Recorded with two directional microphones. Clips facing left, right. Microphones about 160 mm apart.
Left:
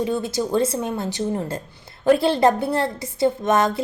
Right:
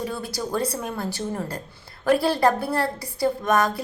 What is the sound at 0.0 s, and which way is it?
A woman's voice, 20° left (ahead or behind).